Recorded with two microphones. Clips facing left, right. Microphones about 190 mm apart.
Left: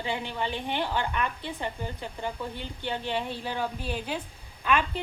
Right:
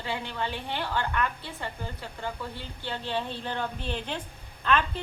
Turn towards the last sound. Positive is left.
turn(degrees=10)  # may be behind; listen again after turning